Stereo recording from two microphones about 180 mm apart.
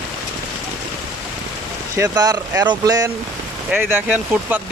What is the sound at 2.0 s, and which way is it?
Speech, 20° right (ahead or behind).